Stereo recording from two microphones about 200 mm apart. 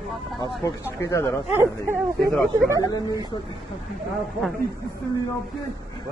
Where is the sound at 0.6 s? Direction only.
15° left (ahead or behind).